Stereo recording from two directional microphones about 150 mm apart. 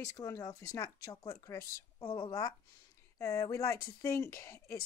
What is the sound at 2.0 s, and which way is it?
Speech, 35° left (ahead or behind).